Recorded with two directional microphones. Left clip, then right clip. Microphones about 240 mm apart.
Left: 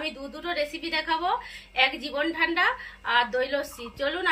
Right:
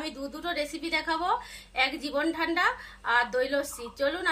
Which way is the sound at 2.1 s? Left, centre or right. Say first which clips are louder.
Left 2 dB; right.